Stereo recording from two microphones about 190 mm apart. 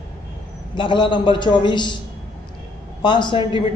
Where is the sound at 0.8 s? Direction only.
25° left (ahead or behind).